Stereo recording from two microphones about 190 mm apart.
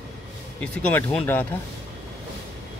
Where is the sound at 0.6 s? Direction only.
5° left (ahead or behind).